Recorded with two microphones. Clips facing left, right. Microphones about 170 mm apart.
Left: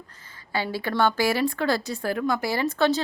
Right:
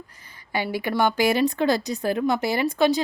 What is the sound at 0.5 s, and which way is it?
A woman's voice, 15° right (ahead or behind).